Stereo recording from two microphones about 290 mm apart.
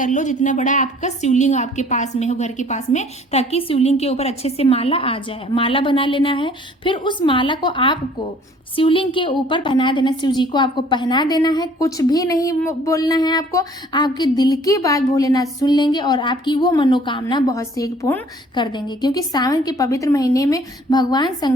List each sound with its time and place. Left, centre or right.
0.0 s a woman's voice: left